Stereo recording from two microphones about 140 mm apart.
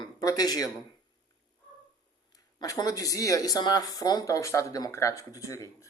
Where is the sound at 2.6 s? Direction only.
25° left (ahead or behind).